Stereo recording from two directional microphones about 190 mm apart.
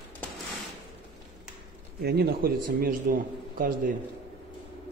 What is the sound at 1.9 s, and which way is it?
A man's voice, 55° right (ahead or behind).